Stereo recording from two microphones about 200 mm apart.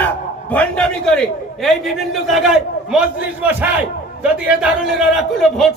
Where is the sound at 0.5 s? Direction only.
5° left (ahead or behind).